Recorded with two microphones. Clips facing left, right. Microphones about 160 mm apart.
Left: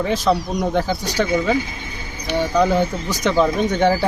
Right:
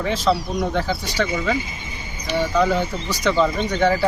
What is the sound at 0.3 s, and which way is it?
Speech, 15° left (ahead or behind).